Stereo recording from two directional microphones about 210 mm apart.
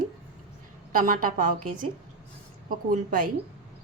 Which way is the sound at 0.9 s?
40° right (ahead or behind).